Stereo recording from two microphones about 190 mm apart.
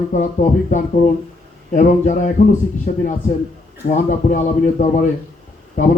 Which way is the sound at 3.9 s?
40° left (ahead or behind).